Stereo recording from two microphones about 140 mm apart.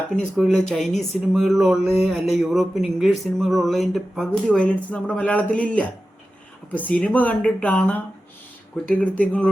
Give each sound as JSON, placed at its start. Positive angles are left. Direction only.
{"t": 0.3, "sound": "speech", "side_deg": 0}